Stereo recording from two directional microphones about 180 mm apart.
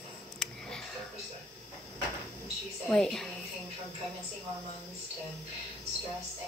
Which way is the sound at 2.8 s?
Centre (ahead or behind).